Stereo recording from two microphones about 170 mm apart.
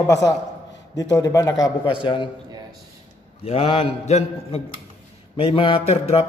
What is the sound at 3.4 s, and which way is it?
Speech, 35° left (ahead or behind).